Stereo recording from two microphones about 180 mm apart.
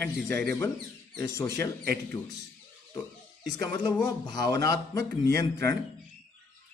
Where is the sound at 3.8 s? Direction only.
25° left (ahead or behind).